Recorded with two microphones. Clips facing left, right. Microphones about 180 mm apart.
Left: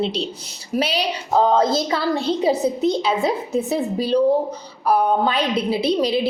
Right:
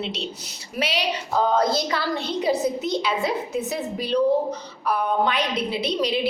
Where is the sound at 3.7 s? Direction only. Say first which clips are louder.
Left 6 dB; 30° left (ahead or behind).